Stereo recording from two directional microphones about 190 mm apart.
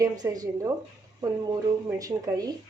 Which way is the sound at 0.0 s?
20° right (ahead or behind).